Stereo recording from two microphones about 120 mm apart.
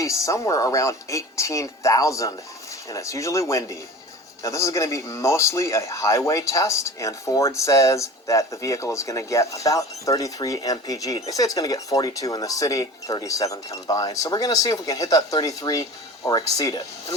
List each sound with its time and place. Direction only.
0.0 s speech: 25° left (ahead or behind)